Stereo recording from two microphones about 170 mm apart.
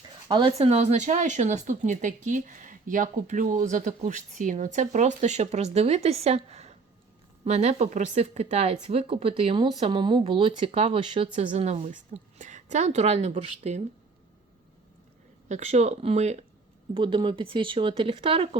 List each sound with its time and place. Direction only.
0.3 s speech: 30° right (ahead or behind)
15.4 s speech: 40° right (ahead or behind)